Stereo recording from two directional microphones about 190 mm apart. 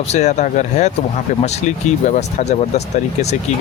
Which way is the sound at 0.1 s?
40° left (ahead or behind).